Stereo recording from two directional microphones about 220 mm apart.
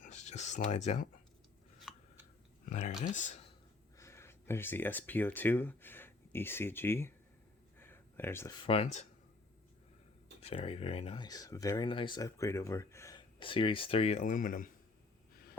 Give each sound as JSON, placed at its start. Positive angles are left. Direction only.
{"t": 0.0, "sound": "speech", "side_deg": 30}
{"t": 1.8, "sound": "a sound", "side_deg": 0}
{"t": 2.6, "sound": "speech", "side_deg": 30}
{"t": 3.9, "sound": "speech", "side_deg": 10}
{"t": 7.8, "sound": "a sound", "side_deg": 10}
{"t": 8.6, "sound": "speech", "side_deg": 25}
{"t": 10.4, "sound": "speech", "side_deg": 25}